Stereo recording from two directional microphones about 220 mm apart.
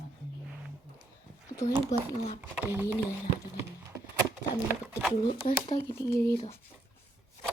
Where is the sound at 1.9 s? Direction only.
30° left (ahead or behind).